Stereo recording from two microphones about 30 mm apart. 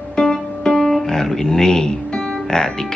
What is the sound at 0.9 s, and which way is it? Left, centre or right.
Speech, centre.